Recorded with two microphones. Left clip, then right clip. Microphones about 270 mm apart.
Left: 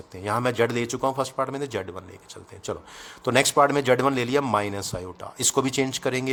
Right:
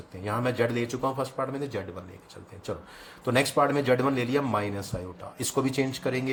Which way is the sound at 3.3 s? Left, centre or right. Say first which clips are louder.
Left 4 dB; left.